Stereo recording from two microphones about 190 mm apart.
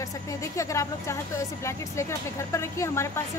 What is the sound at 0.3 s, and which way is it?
Speech, 15° left (ahead or behind).